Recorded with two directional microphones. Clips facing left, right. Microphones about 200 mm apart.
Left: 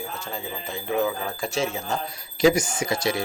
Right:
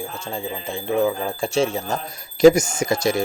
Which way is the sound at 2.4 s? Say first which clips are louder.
Right 7 dB; 45° right (ahead or behind).